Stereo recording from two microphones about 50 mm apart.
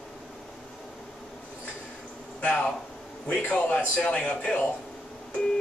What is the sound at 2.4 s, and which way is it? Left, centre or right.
A man's voice, left.